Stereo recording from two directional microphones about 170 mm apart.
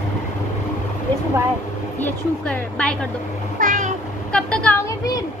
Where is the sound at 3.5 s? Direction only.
50° right (ahead or behind).